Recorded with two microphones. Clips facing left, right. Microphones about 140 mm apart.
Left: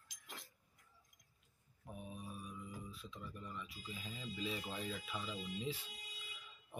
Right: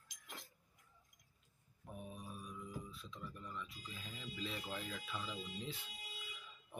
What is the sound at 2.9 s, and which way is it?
Speech, 10° left (ahead or behind).